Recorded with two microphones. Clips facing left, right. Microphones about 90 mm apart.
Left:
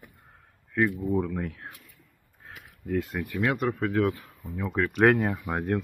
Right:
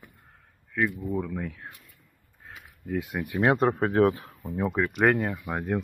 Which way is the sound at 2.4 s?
Centre (ahead or behind).